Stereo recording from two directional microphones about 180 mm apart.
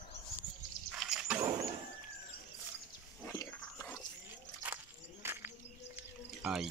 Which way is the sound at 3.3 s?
10° left (ahead or behind).